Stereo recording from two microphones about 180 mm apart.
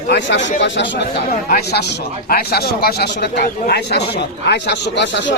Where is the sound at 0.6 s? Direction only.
85° left.